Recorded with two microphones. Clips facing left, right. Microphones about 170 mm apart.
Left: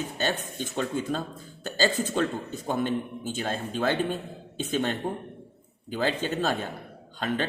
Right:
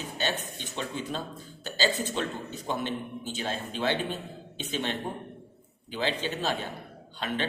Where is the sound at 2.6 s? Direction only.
45° left (ahead or behind).